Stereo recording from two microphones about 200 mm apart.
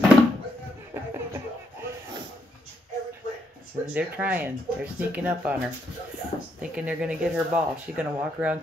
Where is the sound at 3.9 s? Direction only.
10° right (ahead or behind).